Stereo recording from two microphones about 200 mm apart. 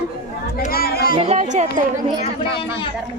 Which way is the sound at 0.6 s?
50° left (ahead or behind).